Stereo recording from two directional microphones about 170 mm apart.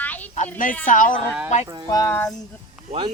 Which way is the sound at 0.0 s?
10° left (ahead or behind).